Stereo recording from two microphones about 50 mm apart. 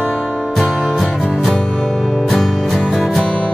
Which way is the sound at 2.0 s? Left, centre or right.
Centre.